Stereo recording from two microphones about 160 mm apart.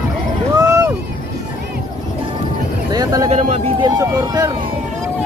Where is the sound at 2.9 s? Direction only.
25° right (ahead or behind).